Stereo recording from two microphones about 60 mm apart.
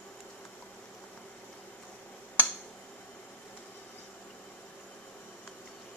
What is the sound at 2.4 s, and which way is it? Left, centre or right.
Finger snapping, left.